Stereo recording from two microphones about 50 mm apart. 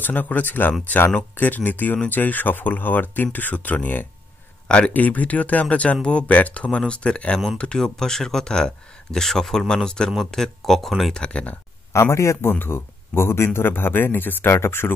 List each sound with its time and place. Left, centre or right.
0.0 s speech: left
4.6 s speech: centre
4.9 s speech: left
7.8 s speech: centre
11.1 s speech: left
11.9 s speech: left
12.4 s speech: left
14.5 s speech: left